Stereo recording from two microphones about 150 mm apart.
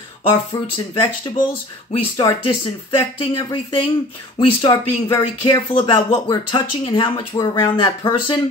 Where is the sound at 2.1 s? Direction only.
35° left (ahead or behind).